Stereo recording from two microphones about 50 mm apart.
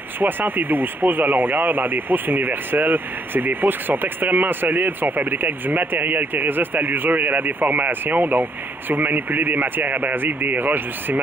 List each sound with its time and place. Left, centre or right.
0.2 s speech: right